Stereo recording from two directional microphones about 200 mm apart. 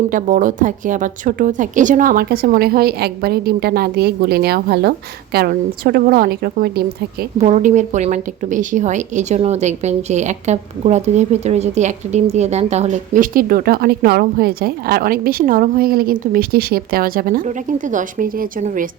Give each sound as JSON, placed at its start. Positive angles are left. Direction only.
{"t": 0.1, "sound": "a woman's voice", "side_deg": -40}
{"t": 7.3, "sound": "a woman's voice", "side_deg": -35}